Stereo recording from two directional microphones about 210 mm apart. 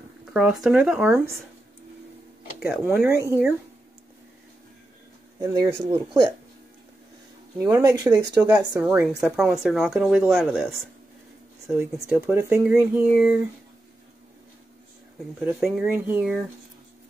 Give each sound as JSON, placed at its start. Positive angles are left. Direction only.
{"t": 0.2, "sound": "speech", "side_deg": -5}
{"t": 2.6, "sound": "speech", "side_deg": -5}
{"t": 5.4, "sound": "speech", "side_deg": -20}
{"t": 7.5, "sound": "speech", "side_deg": -10}
{"t": 11.6, "sound": "speech", "side_deg": -10}
{"t": 15.4, "sound": "speech", "side_deg": 0}